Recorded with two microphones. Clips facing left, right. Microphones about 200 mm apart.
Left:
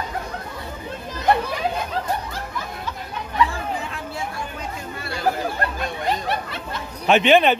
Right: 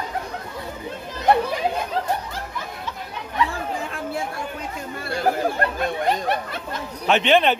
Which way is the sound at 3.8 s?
50° right (ahead or behind).